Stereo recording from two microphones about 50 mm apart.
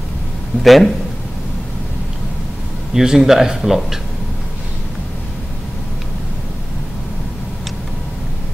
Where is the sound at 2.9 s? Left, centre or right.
Centre.